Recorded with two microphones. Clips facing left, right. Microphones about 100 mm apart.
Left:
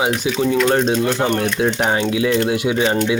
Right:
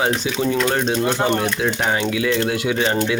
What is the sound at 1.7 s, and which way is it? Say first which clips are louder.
Speech: left 2 dB; 25° left (ahead or behind).